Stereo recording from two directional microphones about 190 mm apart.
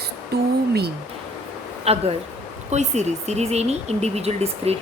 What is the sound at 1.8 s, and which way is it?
Speech, 35° right (ahead or behind).